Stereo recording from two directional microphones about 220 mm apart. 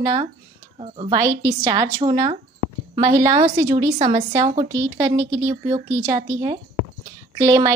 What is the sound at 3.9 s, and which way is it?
Speech, 35° right (ahead or behind).